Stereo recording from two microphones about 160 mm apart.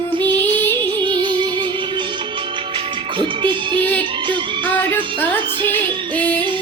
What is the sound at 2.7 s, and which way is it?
Music, 30° right (ahead or behind).